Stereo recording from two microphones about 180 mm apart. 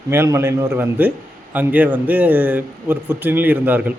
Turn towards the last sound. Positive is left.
turn(degrees=-10)  # may be behind; listen again after turning